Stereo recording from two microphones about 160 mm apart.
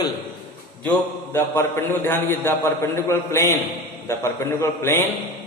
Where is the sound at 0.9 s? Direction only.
15° left (ahead or behind).